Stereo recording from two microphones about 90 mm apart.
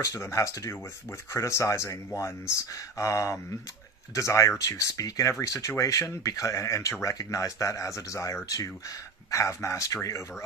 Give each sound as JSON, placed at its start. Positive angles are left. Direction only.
{"t": 0.0, "sound": "speech", "side_deg": 35}